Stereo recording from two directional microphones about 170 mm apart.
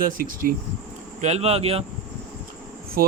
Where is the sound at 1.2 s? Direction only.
40° right (ahead or behind).